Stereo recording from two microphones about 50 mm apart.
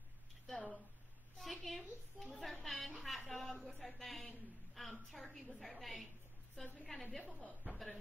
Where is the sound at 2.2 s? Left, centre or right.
Centre.